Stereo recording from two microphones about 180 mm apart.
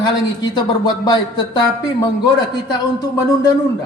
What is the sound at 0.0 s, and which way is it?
Speech, 25° left (ahead or behind).